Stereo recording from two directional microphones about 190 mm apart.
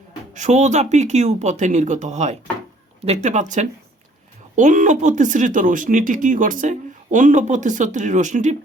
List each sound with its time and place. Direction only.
0.3 s speech: 40° right (ahead or behind)
4.5 s speech: 40° right (ahead or behind)